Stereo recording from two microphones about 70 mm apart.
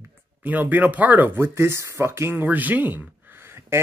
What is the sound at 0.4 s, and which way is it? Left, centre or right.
Speech, right.